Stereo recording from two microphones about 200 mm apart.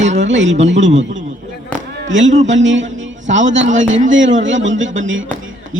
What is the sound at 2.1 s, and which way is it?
A man's voice, 70° right (ahead or behind).